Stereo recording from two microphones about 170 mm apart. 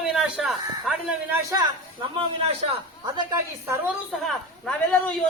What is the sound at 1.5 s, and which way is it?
Speech, 25° right (ahead or behind).